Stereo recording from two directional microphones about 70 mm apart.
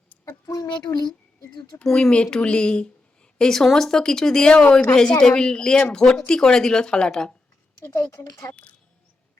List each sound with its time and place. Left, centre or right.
0.4 s speech: left
1.8 s speech: centre
7.8 s speech: left